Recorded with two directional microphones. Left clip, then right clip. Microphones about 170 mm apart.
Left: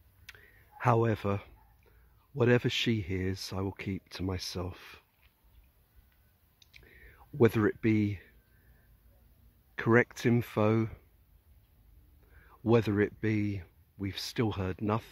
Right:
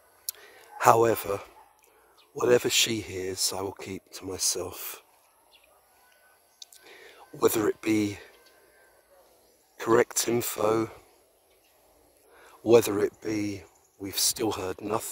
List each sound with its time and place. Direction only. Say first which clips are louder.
0.2 s a sound: right 9 dB; 10° right (ahead or behind)
2.3 s speech: right 5 dB; 5° right (ahead or behind)
6.6 s whispering: right 13 dB; 20° right (ahead or behind)
7.1 s speech: right 2 dB; 10° right (ahead or behind)
9.8 s speech: right 3 dB; 5° right (ahead or behind)
12.4 s speech: right 8 dB; 10° right (ahead or behind)